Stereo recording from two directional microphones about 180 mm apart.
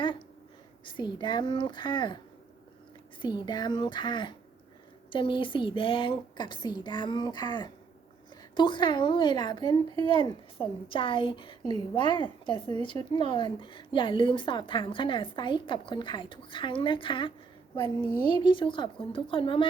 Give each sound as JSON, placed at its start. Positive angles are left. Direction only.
{"t": 0.9, "sound": "speech", "side_deg": 25}
{"t": 18.3, "sound": "speech", "side_deg": 25}